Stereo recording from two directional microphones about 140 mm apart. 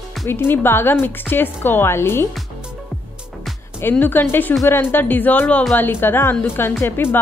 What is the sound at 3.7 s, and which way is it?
A woman's voice, 15° left (ahead or behind).